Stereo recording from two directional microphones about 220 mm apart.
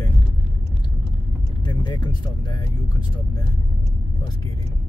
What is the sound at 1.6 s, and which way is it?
Speech, 20° left (ahead or behind).